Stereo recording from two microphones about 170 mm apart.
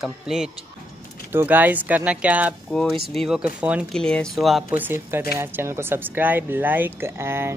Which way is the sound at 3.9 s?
5° left (ahead or behind).